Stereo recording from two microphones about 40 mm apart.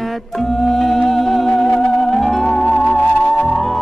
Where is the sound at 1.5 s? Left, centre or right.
Centre.